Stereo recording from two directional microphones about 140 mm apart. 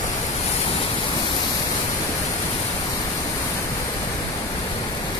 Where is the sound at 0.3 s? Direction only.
50° left (ahead or behind).